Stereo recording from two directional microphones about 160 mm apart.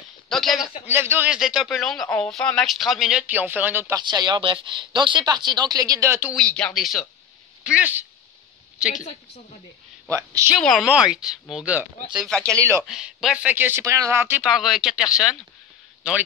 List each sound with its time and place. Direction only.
0.3 s speech: centre (ahead or behind)
0.8 s speech: 15° right (ahead or behind)
4.0 s speech: 30° right (ahead or behind)
6.3 s speech: 5° left (ahead or behind)
8.9 s a woman's voice: 45° left (ahead or behind)
10.0 s speech: 20° right (ahead or behind)
10.6 s speech: centre (ahead or behind)
12.3 s speech: 5° left (ahead or behind)
12.5 s speech: 15° right (ahead or behind)
12.8 s speech: 5° right (ahead or behind)